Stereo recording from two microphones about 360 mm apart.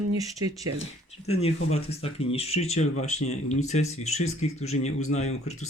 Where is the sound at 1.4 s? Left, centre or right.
Centre.